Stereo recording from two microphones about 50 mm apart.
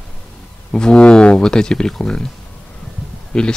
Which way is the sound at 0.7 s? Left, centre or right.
Centre.